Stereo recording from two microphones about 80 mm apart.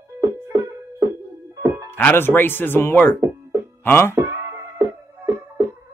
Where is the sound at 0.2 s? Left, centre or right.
Right.